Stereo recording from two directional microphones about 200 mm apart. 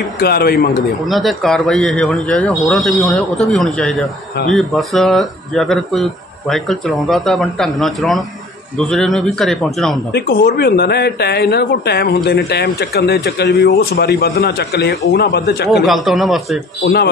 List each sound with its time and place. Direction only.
0.2 s speech: 50° left (ahead or behind)
1.0 s a man's voice: centre (ahead or behind)
10.1 s speech: 50° left (ahead or behind)
15.8 s a man's voice: centre (ahead or behind)
16.8 s speech: 55° left (ahead or behind)